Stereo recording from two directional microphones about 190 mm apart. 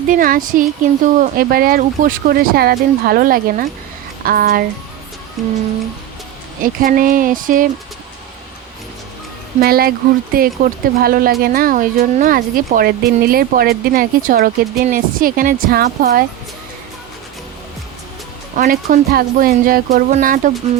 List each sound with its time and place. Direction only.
0.1 s speech: 45° right (ahead or behind)
5.4 s music: centre (ahead or behind)
6.6 s speech: 45° right (ahead or behind)
9.6 s speech: 50° right (ahead or behind)
18.5 s speech: 45° right (ahead or behind)